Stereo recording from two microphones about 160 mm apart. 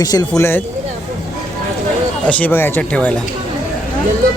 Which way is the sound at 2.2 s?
10° left (ahead or behind).